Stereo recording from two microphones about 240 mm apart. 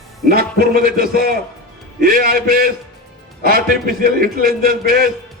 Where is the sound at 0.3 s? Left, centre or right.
Right.